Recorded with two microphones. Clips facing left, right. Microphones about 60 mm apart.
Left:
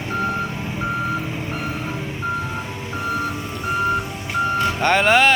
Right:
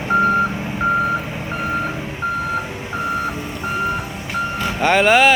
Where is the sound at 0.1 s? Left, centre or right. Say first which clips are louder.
Right 8 dB; right.